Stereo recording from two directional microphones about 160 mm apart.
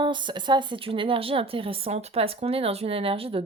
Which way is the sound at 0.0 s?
30° right (ahead or behind).